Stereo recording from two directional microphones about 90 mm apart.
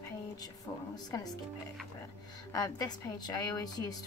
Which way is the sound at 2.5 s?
45° left (ahead or behind).